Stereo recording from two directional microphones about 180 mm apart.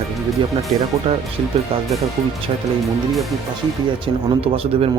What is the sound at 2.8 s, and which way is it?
Speech, centre (ahead or behind).